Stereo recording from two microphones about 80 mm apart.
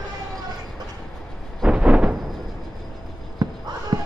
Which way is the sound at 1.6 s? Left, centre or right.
Centre.